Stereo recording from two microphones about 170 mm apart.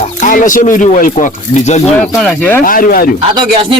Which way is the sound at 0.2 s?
50° left (ahead or behind).